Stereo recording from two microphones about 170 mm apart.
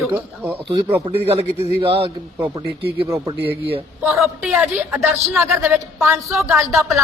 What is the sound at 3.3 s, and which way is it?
Speech, 75° right (ahead or behind).